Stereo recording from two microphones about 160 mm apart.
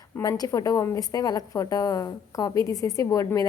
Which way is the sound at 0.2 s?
20° left (ahead or behind).